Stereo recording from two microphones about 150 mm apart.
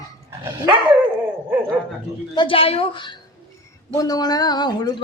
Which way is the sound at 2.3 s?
35° left (ahead or behind).